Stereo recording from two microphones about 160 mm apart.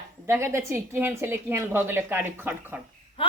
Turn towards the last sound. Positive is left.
turn(degrees=35)  # may be behind; listen again after turning